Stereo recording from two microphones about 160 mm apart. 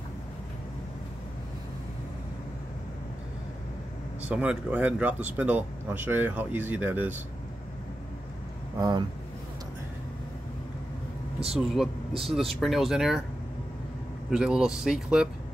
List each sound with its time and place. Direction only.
4.2 s speech: 10° right (ahead or behind)
8.7 s speech: 25° right (ahead or behind)
11.5 s speech: centre (ahead or behind)
14.3 s speech: 5° right (ahead or behind)